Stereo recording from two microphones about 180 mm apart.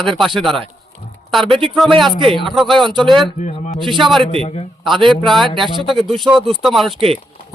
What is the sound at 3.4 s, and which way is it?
Speech, 40° left (ahead or behind).